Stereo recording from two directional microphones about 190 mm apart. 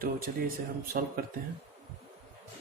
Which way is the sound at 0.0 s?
50° right (ahead or behind).